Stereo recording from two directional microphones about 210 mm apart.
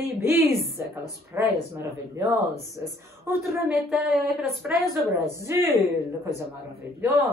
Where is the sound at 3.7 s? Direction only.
Centre (ahead or behind).